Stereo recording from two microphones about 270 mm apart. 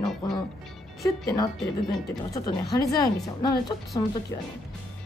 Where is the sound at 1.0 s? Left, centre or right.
Centre.